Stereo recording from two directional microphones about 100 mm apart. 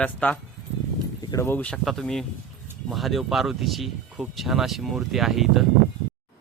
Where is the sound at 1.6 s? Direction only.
10° left (ahead or behind); by 5.7 s 5° right (ahead or behind).